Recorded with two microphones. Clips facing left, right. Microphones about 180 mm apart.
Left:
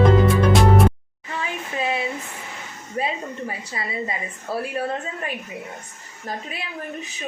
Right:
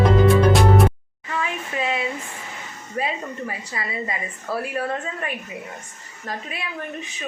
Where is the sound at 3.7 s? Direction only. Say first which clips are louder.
Left 1 dB; 25° left (ahead or behind).